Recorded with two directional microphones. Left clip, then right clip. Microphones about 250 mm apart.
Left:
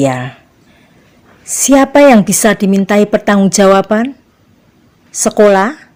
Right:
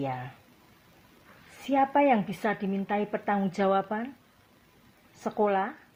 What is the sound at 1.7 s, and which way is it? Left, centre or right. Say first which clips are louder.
A woman's voice: left 17 dB; left.